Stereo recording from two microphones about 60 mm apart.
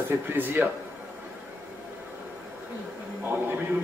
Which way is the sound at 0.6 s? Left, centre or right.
Right.